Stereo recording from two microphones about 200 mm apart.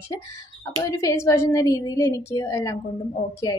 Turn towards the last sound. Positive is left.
turn(degrees=20)  # may be behind; listen again after turning